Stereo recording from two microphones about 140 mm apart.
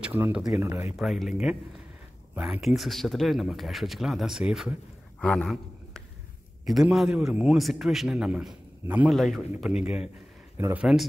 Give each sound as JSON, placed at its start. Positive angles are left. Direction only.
{"t": 0.0, "sound": "speech", "side_deg": -10}
{"t": 0.9, "sound": "a man's voice", "side_deg": 0}
{"t": 5.2, "sound": "a sound", "side_deg": 5}
{"t": 6.6, "sound": "a man's voice", "side_deg": 0}
{"t": 9.1, "sound": "a man's voice", "side_deg": 0}